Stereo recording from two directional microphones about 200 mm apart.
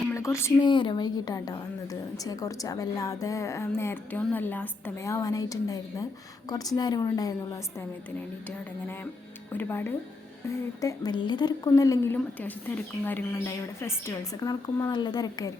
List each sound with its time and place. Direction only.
0.1 s a woman's voice: 15° left (ahead or behind)
9.5 s a woman's voice: 10° left (ahead or behind)